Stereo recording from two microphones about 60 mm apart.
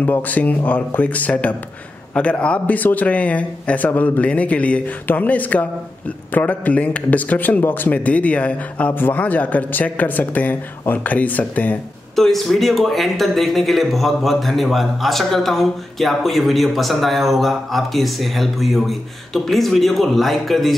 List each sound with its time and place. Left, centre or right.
0.0 s a man's voice: left
12.2 s speech: centre